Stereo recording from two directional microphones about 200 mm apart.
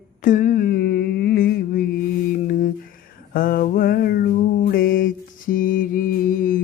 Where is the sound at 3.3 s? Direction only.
45° left (ahead or behind).